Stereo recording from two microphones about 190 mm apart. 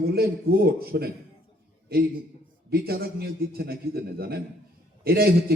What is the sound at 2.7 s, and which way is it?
A man's voice, 55° right (ahead or behind).